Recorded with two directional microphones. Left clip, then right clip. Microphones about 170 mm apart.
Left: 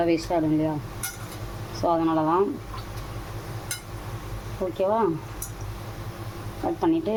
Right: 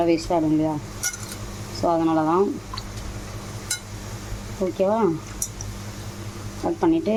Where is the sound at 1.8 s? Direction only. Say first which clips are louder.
Right 2 dB; 20° right (ahead or behind).